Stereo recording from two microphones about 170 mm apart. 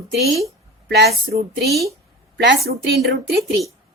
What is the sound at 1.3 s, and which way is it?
Speech, 60° right (ahead or behind).